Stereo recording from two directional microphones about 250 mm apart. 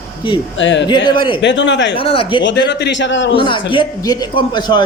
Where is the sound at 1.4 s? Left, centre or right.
Left.